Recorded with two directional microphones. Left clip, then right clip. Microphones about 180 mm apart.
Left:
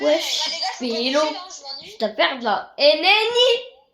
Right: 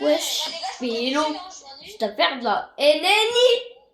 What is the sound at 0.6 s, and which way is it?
Speech, 50° left (ahead or behind).